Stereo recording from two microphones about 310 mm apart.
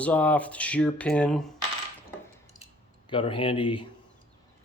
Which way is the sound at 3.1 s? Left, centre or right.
Centre.